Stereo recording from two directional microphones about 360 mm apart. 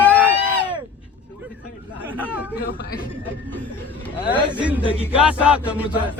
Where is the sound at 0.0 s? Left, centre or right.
Centre.